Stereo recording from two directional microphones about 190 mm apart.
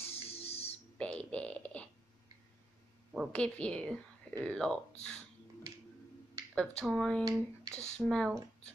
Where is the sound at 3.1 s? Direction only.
5° left (ahead or behind).